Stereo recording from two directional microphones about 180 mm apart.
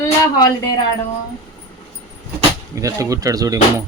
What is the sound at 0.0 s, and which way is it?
Speech, 20° left (ahead or behind).